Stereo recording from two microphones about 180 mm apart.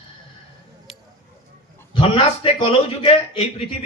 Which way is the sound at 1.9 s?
30° left (ahead or behind).